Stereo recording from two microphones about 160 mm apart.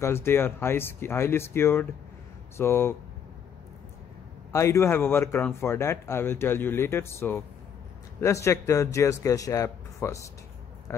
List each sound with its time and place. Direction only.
0.0 s speech: 15° left (ahead or behind)
4.5 s speech: 15° left (ahead or behind)